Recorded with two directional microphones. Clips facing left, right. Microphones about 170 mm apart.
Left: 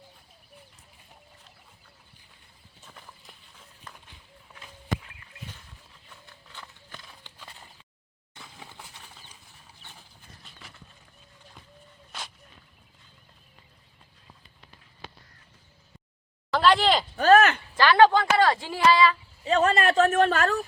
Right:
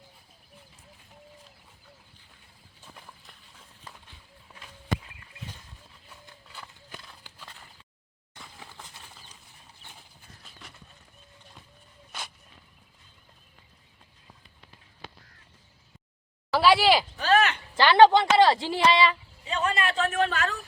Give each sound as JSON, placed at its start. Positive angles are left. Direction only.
{"t": 2.8, "sound": "horse", "side_deg": -5}
{"t": 6.5, "sound": "horse", "side_deg": -10}
{"t": 8.4, "sound": "a sound", "side_deg": 10}
{"t": 16.5, "sound": "a sound", "side_deg": -10}
{"t": 17.2, "sound": "speech", "side_deg": 45}
{"t": 17.7, "sound": "a woman's voice", "side_deg": -25}
{"t": 19.5, "sound": "speech", "side_deg": 45}